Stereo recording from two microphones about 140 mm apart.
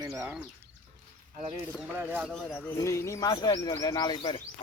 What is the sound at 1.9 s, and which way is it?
Speech, 15° right (ahead or behind).